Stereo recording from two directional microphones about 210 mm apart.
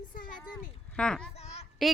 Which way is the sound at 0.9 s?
5° left (ahead or behind).